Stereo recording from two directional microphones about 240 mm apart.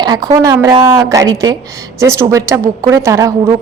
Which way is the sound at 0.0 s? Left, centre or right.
Centre.